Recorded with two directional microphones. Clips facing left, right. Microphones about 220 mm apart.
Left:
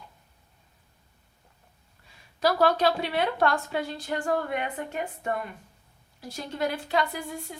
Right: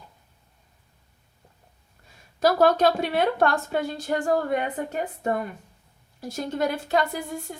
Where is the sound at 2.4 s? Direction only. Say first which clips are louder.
Right 4 dB; 45° right (ahead or behind).